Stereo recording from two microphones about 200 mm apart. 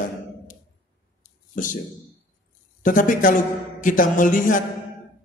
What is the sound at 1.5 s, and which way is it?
Speech, 40° left (ahead or behind).